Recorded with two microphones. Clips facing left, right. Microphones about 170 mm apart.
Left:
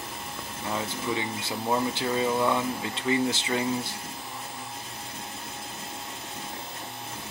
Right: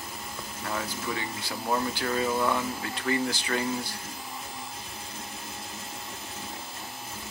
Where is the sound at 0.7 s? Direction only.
20° left (ahead or behind).